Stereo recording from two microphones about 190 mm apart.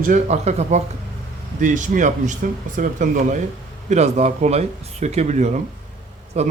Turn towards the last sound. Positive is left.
turn(degrees=-35)  # may be behind; listen again after turning